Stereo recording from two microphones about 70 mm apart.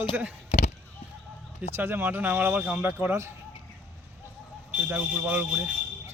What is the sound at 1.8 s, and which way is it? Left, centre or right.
Speech, right.